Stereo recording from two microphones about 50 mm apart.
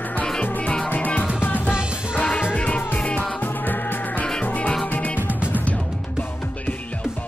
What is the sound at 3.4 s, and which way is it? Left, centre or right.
Music, left.